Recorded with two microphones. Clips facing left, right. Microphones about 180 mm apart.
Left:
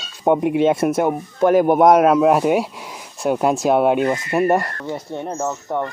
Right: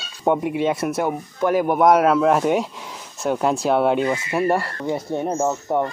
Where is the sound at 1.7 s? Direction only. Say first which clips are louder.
Even; 20° left (ahead or behind).